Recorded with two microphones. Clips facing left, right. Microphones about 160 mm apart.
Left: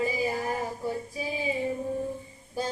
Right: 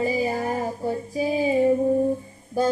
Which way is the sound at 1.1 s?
45° right (ahead or behind).